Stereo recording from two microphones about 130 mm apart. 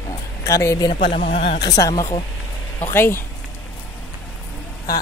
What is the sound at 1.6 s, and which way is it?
Speech, 30° left (ahead or behind).